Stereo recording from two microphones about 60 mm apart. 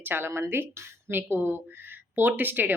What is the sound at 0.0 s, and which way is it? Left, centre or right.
Speech, right.